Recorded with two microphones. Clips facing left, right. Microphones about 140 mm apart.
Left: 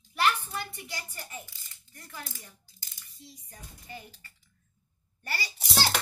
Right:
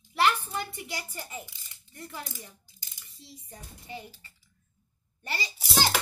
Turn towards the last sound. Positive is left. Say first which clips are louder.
# right 2 dB
turn(degrees=0)  # may be behind; listen again after turning